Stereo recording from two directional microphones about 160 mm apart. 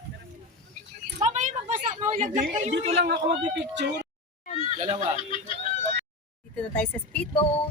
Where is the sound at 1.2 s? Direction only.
50° right (ahead or behind).